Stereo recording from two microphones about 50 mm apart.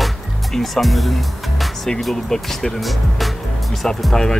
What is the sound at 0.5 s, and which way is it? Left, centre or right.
Speech, centre.